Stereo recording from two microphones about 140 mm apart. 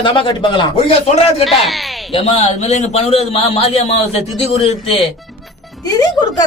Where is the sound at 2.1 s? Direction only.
45° left (ahead or behind).